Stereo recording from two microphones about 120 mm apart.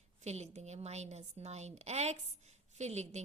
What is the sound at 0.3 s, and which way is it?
A woman's voice, 70° right (ahead or behind).